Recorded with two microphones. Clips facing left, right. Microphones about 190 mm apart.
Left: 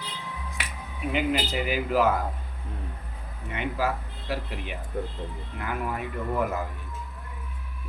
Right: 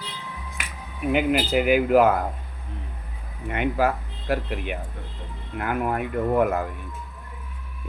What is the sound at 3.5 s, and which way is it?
Speech, 55° right (ahead or behind).